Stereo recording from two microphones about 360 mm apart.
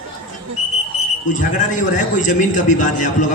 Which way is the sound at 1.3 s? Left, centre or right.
Left.